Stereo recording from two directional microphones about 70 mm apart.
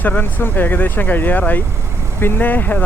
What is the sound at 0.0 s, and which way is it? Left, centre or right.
Speech, left.